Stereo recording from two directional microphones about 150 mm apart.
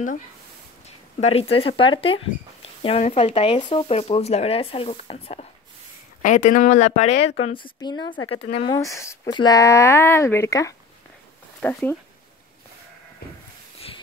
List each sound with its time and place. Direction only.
0.8 s speech: 45° left (ahead or behind)
6.2 s speech: 55° left (ahead or behind)
7.4 s speech: 35° left (ahead or behind)
8.7 s speech: 20° left (ahead or behind)
11.6 s speech: 10° left (ahead or behind)
13.2 s a sound: 90° left
13.7 s a sound: 40° left (ahead or behind)